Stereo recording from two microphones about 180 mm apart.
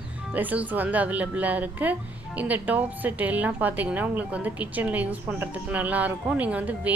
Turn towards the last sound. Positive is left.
turn(degrees=-10)  # may be behind; listen again after turning